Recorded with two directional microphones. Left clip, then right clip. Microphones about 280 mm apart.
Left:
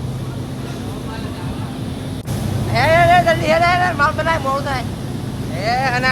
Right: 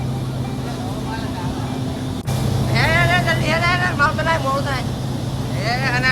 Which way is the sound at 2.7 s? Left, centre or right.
Centre.